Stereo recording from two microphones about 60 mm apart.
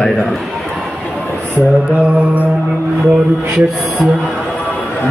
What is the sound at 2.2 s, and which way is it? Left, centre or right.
Mantra, right.